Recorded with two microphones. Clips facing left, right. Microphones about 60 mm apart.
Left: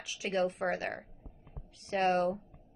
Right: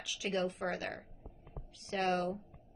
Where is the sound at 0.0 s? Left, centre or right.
Left.